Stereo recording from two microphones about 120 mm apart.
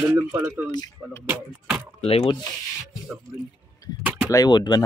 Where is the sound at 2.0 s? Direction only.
55° left (ahead or behind).